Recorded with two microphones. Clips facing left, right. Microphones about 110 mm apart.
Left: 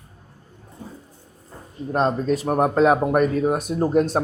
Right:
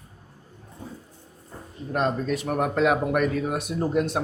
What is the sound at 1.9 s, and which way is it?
Speech, 35° left (ahead or behind).